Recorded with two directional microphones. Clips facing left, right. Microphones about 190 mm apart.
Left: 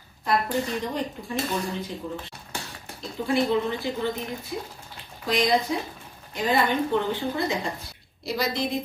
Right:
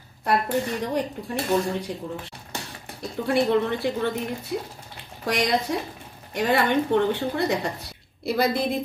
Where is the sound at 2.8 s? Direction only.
65° right (ahead or behind).